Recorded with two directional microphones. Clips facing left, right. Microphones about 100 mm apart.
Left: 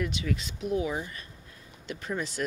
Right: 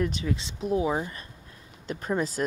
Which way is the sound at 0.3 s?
25° right (ahead or behind).